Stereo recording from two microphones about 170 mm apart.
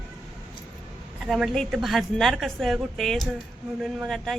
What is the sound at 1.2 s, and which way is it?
A woman's voice, centre (ahead or behind).